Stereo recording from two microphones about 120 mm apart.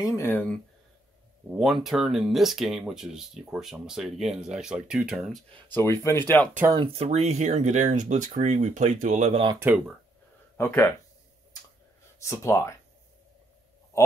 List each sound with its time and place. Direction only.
0.0 s speech: 25° left (ahead or behind)
1.6 s speech: centre (ahead or behind)
5.7 s speech: 20° left (ahead or behind)
6.9 s speech: 60° right (ahead or behind); by 9.3 s 90° right
9.6 s speech: 15° right (ahead or behind)
10.6 s speech: 20° left (ahead or behind)
12.2 s speech: 25° left (ahead or behind)